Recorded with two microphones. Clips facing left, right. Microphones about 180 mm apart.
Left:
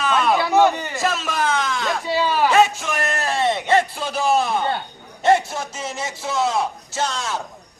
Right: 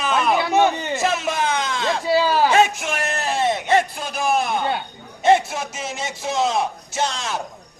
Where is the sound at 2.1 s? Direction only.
35° right (ahead or behind).